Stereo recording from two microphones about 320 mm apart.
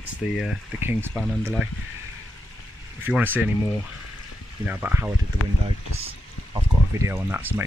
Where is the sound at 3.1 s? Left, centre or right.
Centre.